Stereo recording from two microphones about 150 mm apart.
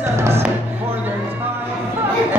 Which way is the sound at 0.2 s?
15° right (ahead or behind).